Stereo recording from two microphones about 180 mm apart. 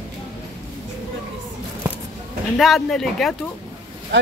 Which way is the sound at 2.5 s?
Centre (ahead or behind).